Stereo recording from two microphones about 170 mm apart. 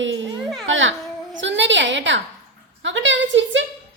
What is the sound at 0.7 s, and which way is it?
A child's voice, 90° right.